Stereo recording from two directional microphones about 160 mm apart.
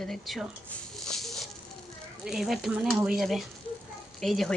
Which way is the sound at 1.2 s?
Centre (ahead or behind).